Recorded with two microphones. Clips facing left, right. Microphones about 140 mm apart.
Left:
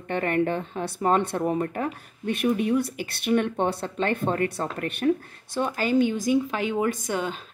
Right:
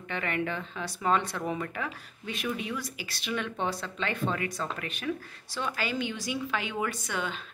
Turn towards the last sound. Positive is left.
turn(degrees=40)  # may be behind; listen again after turning